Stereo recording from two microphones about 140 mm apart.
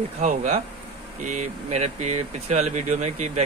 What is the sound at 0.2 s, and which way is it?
A man's voice, 60° right (ahead or behind).